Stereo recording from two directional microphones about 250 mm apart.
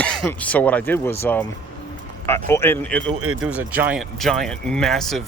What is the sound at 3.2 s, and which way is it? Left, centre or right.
Speech, right.